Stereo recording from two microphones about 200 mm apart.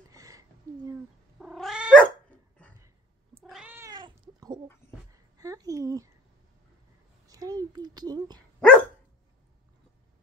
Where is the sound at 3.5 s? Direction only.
5° right (ahead or behind); by 4.6 s 20° right (ahead or behind).